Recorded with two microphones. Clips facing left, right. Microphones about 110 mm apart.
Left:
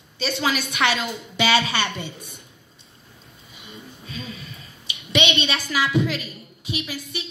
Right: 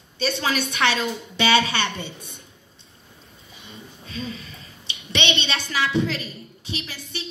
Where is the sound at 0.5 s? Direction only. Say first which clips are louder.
Left 1 dB; 25° right (ahead or behind).